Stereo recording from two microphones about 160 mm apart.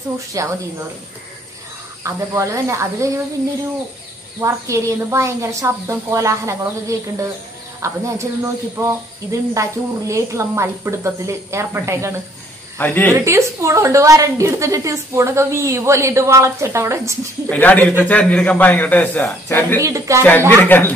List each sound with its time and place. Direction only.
0.3 s speech: 20° right (ahead or behind)
2.0 s a woman's voice: 20° right (ahead or behind)
4.4 s a woman's voice: 20° right (ahead or behind)
12.7 s a man's voice: 10° left (ahead or behind)
13.1 s a woman's voice: 20° right (ahead or behind)
17.5 s a man's voice: 10° left (ahead or behind)
19.8 s speech: 20° right (ahead or behind)
20.2 s a man's voice: 10° left (ahead or behind)